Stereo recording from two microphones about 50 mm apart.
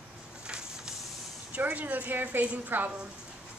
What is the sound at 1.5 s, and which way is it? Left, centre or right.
A woman's voice, right.